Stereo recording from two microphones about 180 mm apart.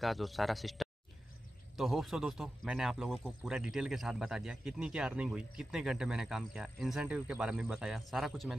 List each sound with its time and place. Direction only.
0.0 s speech: centre (ahead or behind)